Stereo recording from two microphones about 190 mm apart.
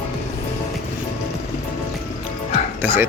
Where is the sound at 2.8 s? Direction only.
10° right (ahead or behind).